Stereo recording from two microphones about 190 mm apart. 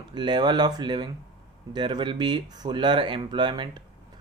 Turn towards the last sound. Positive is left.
turn(degrees=-25)  # may be behind; listen again after turning